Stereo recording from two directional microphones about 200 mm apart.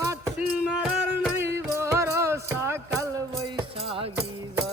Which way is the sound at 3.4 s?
25° right (ahead or behind).